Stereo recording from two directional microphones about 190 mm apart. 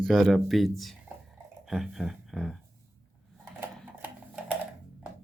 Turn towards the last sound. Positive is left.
turn(degrees=-10)  # may be behind; listen again after turning